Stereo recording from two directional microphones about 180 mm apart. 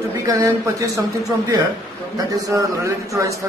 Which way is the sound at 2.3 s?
20° right (ahead or behind).